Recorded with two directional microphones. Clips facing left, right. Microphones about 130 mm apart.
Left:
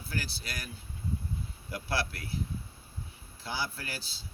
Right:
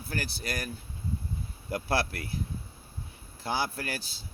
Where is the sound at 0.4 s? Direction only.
45° right (ahead or behind).